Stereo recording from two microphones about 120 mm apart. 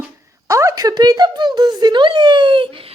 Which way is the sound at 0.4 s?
25° right (ahead or behind).